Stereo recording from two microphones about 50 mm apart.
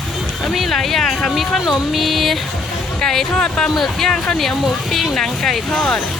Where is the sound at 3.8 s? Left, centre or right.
Centre.